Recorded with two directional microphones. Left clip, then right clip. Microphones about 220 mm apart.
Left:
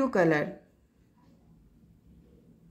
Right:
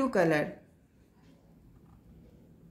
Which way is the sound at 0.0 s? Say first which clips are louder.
Left 2 dB; 15° left (ahead or behind).